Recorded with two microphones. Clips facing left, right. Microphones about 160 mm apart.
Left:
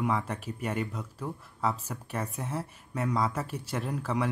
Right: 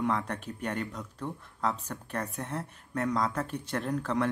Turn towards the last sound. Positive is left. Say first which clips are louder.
# right 1 dB
turn(degrees=5)  # may be behind; listen again after turning